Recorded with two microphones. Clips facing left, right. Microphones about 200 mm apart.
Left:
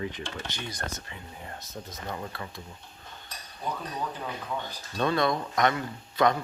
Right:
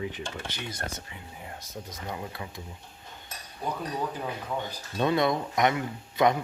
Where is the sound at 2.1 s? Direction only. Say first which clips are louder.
Even; 15° right (ahead or behind).